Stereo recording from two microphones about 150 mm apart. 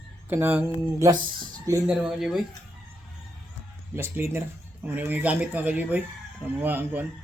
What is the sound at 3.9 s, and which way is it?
A man's voice, 15° right (ahead or behind).